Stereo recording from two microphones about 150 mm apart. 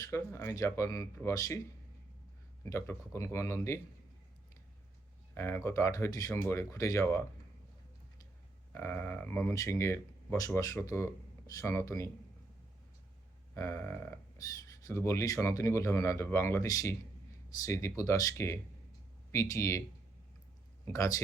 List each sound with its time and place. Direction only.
0.0 s speech: 20° left (ahead or behind)
2.6 s speech: 20° left (ahead or behind)
5.3 s speech: 15° left (ahead or behind)
8.7 s speech: 15° left (ahead or behind)
13.5 s speech: 15° left (ahead or behind)
20.9 s speech: 20° left (ahead or behind)